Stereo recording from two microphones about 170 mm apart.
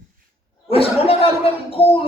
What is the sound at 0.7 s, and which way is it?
Speech, 35° left (ahead or behind).